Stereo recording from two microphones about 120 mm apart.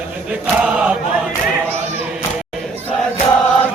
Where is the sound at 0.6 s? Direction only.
10° right (ahead or behind).